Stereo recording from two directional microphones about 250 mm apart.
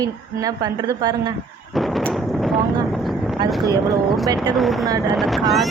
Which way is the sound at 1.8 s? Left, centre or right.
Centre.